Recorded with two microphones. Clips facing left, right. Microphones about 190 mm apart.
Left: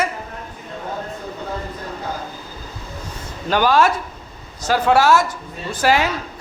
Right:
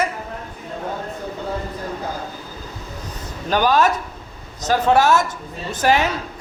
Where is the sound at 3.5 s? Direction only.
15° right (ahead or behind).